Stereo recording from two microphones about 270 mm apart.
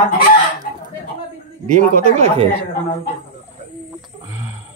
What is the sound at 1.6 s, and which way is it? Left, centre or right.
Speech, right.